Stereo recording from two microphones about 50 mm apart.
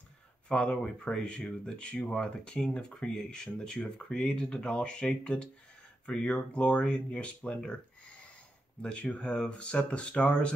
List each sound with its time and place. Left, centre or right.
0.5 s speech: left